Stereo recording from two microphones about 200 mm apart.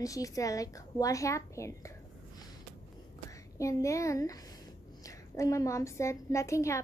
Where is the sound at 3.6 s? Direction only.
15° left (ahead or behind).